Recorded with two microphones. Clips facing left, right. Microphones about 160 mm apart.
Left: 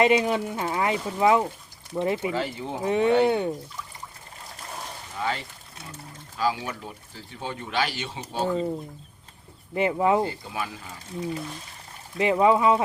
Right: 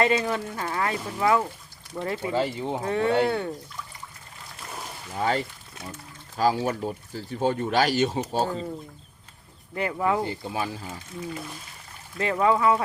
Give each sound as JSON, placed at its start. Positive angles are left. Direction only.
{"t": 0.0, "sound": "speech", "side_deg": 20}
{"t": 2.3, "sound": "speech", "side_deg": -25}
{"t": 2.8, "sound": "speech", "side_deg": 20}
{"t": 5.1, "sound": "speech", "side_deg": -45}
{"t": 9.7, "sound": "speech", "side_deg": 20}
{"t": 10.5, "sound": "speech", "side_deg": -30}
{"t": 12.1, "sound": "speech", "side_deg": 20}